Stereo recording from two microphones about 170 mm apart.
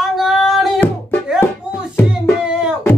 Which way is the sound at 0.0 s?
Centre (ahead or behind).